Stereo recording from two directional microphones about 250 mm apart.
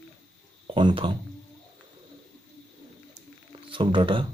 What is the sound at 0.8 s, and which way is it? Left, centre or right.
Speech, centre.